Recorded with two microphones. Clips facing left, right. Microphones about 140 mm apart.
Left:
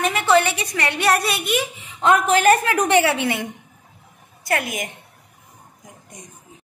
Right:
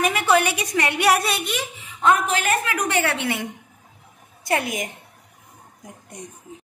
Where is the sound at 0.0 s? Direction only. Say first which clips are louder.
Left 2 dB; 10° right (ahead or behind).